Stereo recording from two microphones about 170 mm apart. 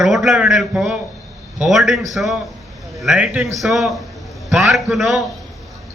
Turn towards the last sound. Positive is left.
turn(degrees=0)  # may be behind; listen again after turning